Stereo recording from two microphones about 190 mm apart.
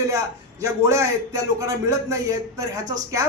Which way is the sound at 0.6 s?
15° right (ahead or behind).